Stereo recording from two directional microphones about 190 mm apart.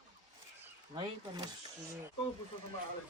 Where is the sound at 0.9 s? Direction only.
20° right (ahead or behind).